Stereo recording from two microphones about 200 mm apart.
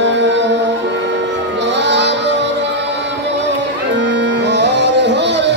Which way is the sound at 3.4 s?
60° right (ahead or behind).